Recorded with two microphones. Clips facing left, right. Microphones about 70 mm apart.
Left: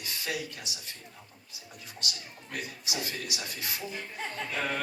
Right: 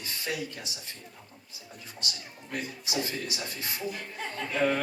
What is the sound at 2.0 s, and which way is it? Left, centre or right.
Speech, right.